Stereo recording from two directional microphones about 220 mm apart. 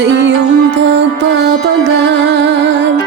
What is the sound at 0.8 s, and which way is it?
Music, 55° right (ahead or behind).